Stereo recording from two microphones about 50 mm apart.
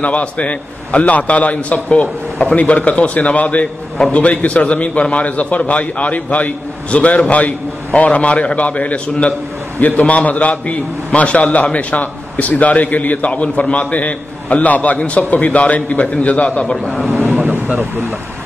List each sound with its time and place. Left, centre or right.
0.0 s a man's voice: left
16.7 s speech: centre